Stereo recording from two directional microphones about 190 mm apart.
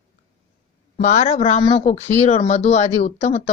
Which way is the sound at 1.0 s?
40° left (ahead or behind).